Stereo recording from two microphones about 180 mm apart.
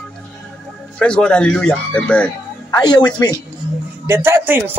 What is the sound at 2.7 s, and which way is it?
Speech, 20° left (ahead or behind).